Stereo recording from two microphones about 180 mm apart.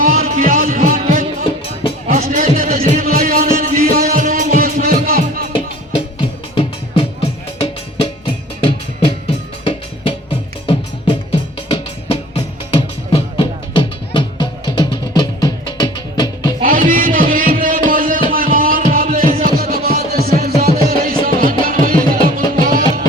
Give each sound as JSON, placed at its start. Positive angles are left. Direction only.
{"t": 0.0, "sound": "music", "side_deg": -45}
{"t": 5.5, "sound": "music", "side_deg": 30}
{"t": 16.6, "sound": "a sound", "side_deg": -50}
{"t": 17.6, "sound": "music", "side_deg": -50}